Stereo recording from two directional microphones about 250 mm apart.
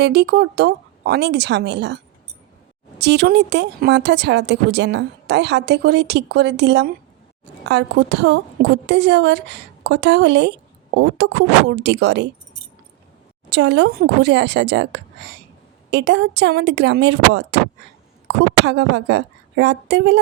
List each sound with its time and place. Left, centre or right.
0.0 s speech: right
3.0 s speech: right
13.5 s speech: right
15.9 s a woman's voice: right